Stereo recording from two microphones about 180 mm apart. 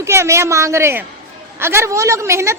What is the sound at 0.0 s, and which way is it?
A woman's voice, 15° right (ahead or behind).